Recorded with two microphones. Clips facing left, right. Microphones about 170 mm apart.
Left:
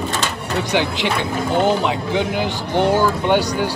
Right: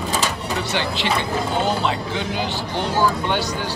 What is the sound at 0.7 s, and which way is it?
Speech, 15° left (ahead or behind).